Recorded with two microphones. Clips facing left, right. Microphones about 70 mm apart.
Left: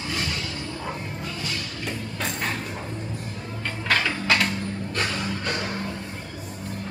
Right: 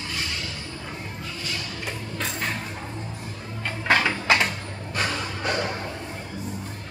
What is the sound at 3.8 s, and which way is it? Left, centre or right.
Music, centre.